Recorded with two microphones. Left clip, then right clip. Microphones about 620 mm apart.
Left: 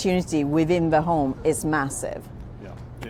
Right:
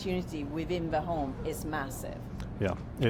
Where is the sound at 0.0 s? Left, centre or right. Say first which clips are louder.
Left 12 dB; left.